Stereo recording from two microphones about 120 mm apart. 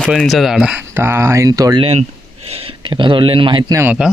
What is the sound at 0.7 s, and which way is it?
Speech, 15° right (ahead or behind).